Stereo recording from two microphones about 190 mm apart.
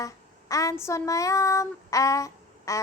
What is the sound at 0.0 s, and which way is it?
Child singing, 15° left (ahead or behind).